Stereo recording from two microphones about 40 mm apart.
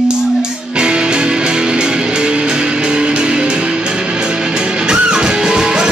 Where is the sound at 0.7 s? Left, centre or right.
Right.